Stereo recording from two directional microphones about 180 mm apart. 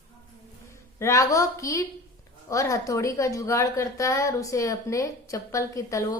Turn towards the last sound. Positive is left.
turn(degrees=20)  # may be behind; listen again after turning